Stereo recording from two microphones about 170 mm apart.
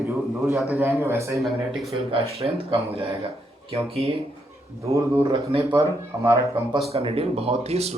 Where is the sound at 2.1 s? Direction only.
35° right (ahead or behind).